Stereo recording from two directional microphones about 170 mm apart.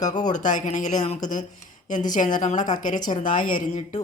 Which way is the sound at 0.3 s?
45° left (ahead or behind).